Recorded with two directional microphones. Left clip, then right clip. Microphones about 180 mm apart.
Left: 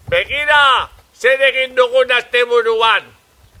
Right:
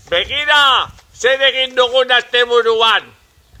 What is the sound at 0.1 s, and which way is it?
A man's voice, 45° right (ahead or behind).